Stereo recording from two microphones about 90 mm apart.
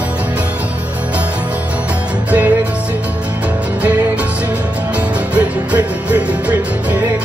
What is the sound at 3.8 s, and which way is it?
Music, 15° right (ahead or behind).